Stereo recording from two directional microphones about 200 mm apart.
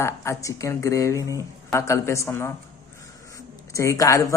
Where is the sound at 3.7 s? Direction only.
15° left (ahead or behind).